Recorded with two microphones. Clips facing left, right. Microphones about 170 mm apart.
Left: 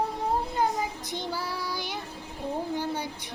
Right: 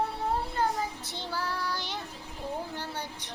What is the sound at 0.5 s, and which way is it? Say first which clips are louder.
Child singing: left 2 dB; 15° left (ahead or behind).